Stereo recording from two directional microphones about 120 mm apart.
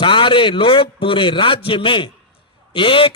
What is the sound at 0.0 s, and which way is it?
A man's voice, 45° left (ahead or behind).